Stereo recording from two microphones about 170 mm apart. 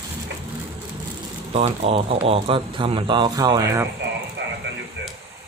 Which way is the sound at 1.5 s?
35° right (ahead or behind).